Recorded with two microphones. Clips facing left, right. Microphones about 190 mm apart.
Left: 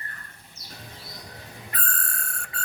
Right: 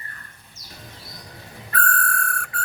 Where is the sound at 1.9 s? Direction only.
25° left (ahead or behind).